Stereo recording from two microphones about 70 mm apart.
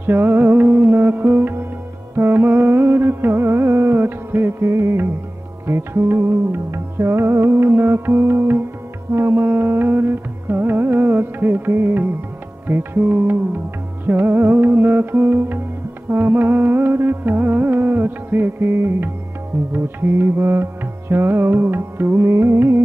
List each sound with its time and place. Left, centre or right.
0.0 s music: right